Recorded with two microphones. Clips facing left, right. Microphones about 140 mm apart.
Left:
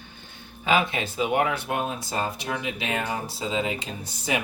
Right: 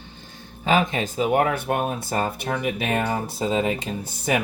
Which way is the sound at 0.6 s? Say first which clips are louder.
Right 3 dB; 40° right (ahead or behind).